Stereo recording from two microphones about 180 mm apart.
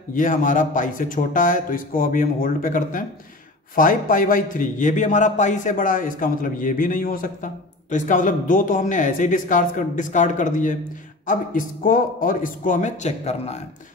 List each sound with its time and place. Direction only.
0.1 s a man's voice: 45° left (ahead or behind)